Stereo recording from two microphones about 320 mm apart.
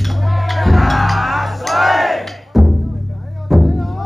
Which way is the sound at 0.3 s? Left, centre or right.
Centre.